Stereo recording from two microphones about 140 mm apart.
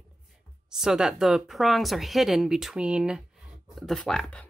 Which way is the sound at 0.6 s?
5° right (ahead or behind).